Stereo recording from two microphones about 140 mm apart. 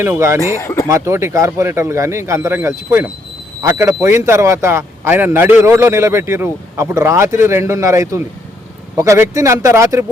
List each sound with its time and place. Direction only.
0.0 s speech: 20° right (ahead or behind)
0.6 s speech: 20° left (ahead or behind)
0.9 s speech: 20° right (ahead or behind)